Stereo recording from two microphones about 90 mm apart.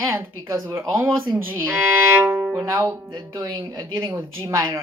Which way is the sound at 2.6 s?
30° right (ahead or behind).